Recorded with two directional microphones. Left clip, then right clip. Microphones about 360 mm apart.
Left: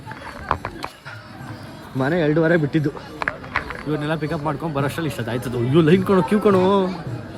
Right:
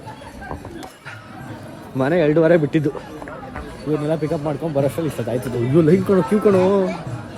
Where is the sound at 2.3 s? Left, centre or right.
Right.